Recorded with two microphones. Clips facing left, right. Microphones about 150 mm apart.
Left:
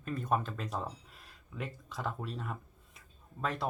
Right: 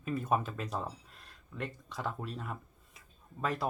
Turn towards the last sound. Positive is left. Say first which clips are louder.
# right 1 dB
turn(degrees=-5)  # may be behind; listen again after turning